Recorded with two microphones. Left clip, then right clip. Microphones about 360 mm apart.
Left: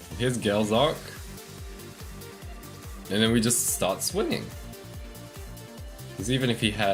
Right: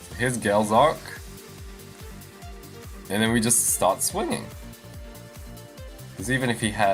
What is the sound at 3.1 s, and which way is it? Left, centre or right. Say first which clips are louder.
Speech: right 1 dB; right.